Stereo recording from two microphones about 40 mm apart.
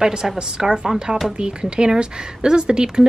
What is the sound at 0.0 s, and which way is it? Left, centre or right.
Speech, centre.